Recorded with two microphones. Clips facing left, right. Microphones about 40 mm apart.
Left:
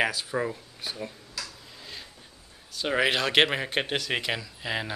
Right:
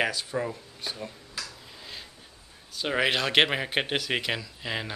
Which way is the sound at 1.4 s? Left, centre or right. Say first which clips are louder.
Even; centre.